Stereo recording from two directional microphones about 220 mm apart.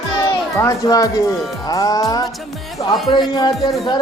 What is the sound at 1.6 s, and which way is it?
Music, 15° left (ahead or behind).